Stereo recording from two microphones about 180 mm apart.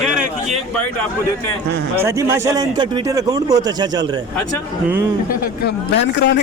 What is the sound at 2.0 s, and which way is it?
A man's voice, 15° right (ahead or behind).